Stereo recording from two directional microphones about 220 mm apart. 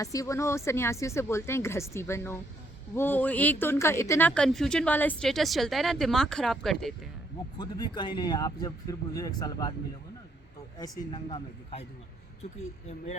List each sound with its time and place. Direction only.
0.0 s speech: 15° left (ahead or behind)
7.6 s speech: 20° left (ahead or behind)
10.8 s a woman's voice: 15° left (ahead or behind)